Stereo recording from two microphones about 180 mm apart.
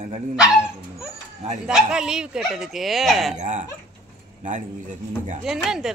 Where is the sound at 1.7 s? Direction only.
5° right (ahead or behind).